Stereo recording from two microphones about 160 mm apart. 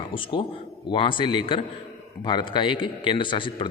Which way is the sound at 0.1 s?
35° left (ahead or behind).